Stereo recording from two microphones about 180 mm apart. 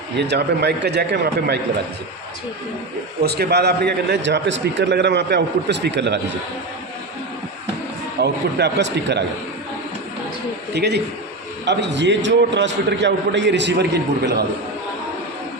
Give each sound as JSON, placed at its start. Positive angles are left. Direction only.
{"t": 0.2, "sound": "a man's voice", "side_deg": -70}
{"t": 3.2, "sound": "a man's voice", "side_deg": -65}
{"t": 8.2, "sound": "a man's voice", "side_deg": -65}
{"t": 10.8, "sound": "a man's voice", "side_deg": -65}